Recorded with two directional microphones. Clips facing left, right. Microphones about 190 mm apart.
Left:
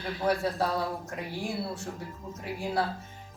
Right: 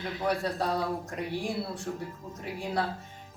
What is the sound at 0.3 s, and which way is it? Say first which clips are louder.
Speech: left 2 dB; centre (ahead or behind).